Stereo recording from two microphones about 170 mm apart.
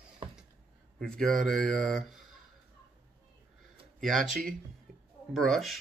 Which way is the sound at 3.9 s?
Centre (ahead or behind).